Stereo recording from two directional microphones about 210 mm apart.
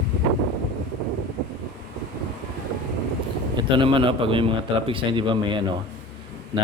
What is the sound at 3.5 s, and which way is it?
A man's voice, 25° right (ahead or behind).